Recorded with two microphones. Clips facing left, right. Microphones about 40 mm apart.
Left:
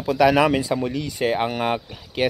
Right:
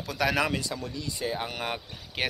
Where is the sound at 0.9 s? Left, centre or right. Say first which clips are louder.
Left 9 dB; left.